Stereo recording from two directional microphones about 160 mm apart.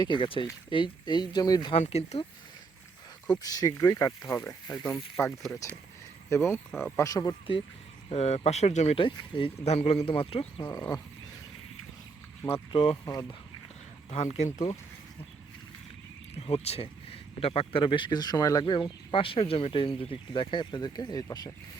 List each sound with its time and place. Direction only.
0.0 s speech: 30° left (ahead or behind)
1.7 s speech: 40° left (ahead or behind)
3.3 s speech: 25° left (ahead or behind)
4.8 s speech: 5° left (ahead or behind)
6.3 s speech: 15° left (ahead or behind)
6.7 s speech: 5° right (ahead or behind)
6.9 s speech: 20° left (ahead or behind)
8.1 s speech: 40° left (ahead or behind); by 11.0 s 25° left (ahead or behind)
12.7 s speech: 35° left (ahead or behind)
14.1 s speech: 50° left (ahead or behind)
16.3 s speech: 40° left (ahead or behind); by 21.5 s 25° left (ahead or behind)